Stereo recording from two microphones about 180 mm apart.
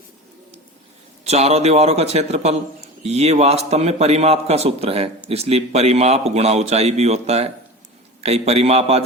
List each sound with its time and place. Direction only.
1.2 s a man's voice: 35° right (ahead or behind)